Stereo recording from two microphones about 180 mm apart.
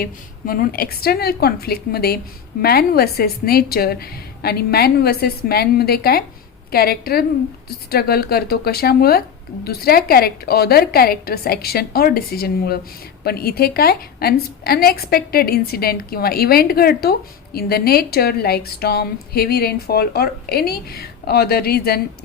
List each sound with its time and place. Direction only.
0.0 s a woman's voice: 55° left (ahead or behind)